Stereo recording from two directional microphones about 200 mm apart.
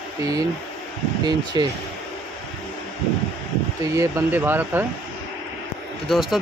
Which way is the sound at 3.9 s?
10° right (ahead or behind).